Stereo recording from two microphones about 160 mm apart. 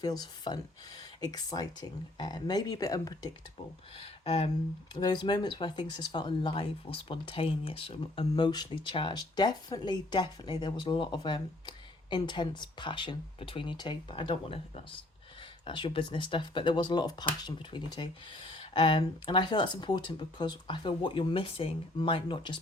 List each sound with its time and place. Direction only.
0.0 s speech: 25° left (ahead or behind)
3.9 s speech: 35° left (ahead or behind)